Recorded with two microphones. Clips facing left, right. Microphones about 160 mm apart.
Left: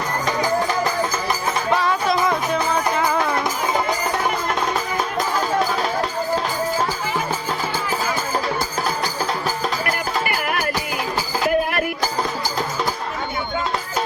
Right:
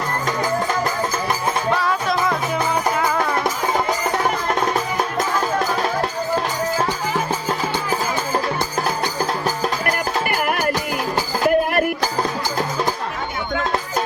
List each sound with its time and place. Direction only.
9.8 s music: 45° right (ahead or behind)